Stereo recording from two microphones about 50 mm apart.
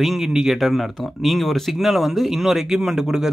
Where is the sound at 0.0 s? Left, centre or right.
Centre.